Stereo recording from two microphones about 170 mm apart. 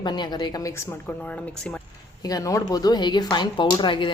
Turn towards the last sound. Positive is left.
turn(degrees=30)  # may be behind; listen again after turning